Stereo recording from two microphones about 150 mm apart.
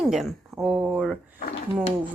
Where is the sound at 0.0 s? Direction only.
Centre (ahead or behind).